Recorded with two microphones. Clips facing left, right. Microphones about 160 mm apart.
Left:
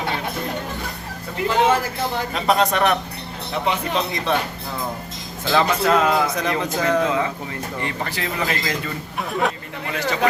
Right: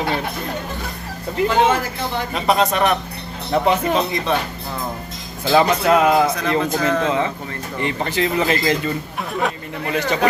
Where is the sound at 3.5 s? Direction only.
45° right (ahead or behind).